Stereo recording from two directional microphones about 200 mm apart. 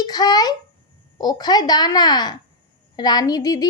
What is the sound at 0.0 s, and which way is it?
A child's voice, 20° left (ahead or behind).